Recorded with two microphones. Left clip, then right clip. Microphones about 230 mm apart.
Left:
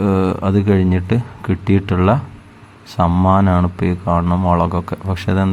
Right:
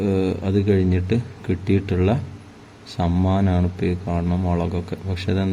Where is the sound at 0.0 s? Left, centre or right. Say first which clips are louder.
Left 5 dB; left.